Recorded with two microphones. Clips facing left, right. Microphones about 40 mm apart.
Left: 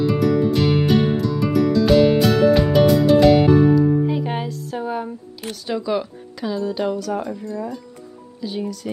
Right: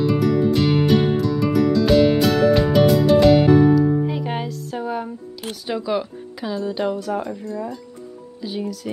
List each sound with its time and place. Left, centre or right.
0.0 s music: centre
5.7 s speech: centre